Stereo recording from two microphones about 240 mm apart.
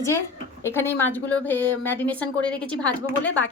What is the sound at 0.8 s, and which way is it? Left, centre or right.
A woman's voice, centre.